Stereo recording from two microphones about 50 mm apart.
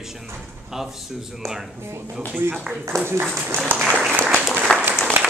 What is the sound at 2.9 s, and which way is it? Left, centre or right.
Speech, right.